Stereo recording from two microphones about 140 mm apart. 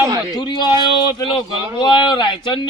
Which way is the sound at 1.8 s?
35° left (ahead or behind).